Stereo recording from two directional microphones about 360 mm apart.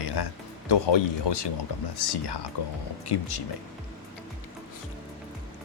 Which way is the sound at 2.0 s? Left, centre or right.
Left.